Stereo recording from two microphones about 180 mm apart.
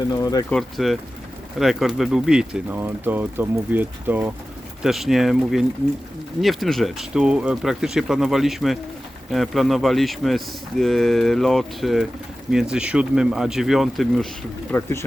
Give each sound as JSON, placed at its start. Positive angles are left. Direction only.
{"t": 0.1, "sound": "speech", "side_deg": 20}
{"t": 0.5, "sound": "speech", "side_deg": 0}
{"t": 14.7, "sound": "speech", "side_deg": 15}